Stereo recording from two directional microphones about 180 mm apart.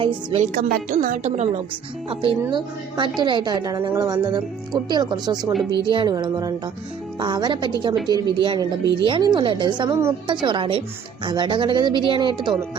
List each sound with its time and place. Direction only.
0.0 s speech: 30° right (ahead or behind)
0.4 s a woman's voice: 45° right (ahead or behind)
2.0 s speech: 30° right (ahead or behind)